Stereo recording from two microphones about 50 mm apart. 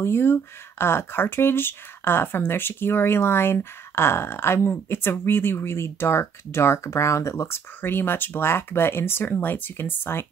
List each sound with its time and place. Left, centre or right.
0.0 s speech: left
9.3 s speech: left